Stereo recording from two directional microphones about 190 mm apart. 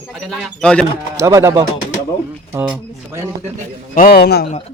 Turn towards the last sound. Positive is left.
turn(degrees=55)  # may be behind; listen again after turning